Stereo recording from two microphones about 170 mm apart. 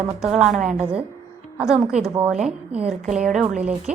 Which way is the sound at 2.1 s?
10° right (ahead or behind).